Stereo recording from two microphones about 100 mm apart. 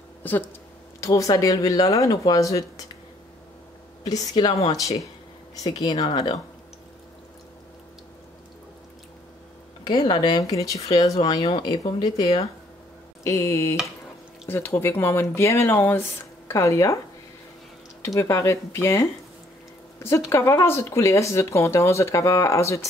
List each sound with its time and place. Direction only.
0.2 s speech: 20° left (ahead or behind)
1.0 s speech: 35° left (ahead or behind)
4.0 s speech: 40° left (ahead or behind)
6.0 s speech: 60° left (ahead or behind)
9.8 s speech: 50° left (ahead or behind)
13.2 s speech: 30° left (ahead or behind)
18.0 s speech: 30° left (ahead or behind)